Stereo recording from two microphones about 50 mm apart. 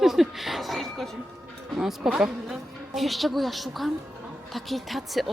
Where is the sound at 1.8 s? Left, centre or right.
Centre.